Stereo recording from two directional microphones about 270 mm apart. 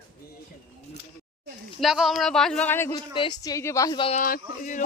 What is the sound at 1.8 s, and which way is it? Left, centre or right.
Speech, centre.